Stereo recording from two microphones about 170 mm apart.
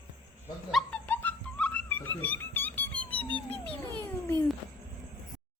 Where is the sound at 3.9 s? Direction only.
10° left (ahead or behind).